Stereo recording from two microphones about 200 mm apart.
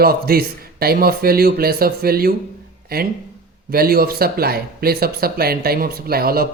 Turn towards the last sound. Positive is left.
turn(degrees=-50)  # may be behind; listen again after turning